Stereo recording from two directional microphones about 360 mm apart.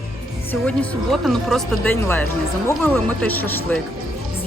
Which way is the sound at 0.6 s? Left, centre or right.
Centre.